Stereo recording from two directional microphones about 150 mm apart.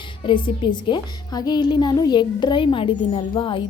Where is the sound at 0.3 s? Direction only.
35° left (ahead or behind).